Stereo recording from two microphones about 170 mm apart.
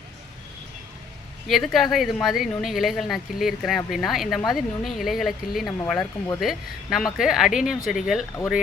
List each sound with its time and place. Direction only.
1.5 s speech: centre (ahead or behind)
6.0 s speech: 20° left (ahead or behind)
6.4 s speech: centre (ahead or behind)